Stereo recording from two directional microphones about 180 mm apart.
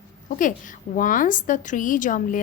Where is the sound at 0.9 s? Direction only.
50° left (ahead or behind).